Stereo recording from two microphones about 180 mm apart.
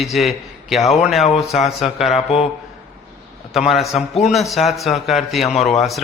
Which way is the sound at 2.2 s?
35° left (ahead or behind).